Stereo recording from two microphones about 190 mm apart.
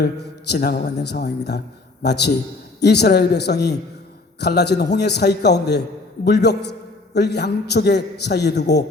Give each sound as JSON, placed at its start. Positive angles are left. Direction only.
{"t": 0.0, "sound": "a man's voice", "side_deg": 60}